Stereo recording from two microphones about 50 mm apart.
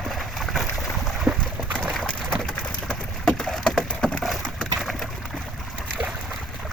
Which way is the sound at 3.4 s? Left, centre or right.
Centre.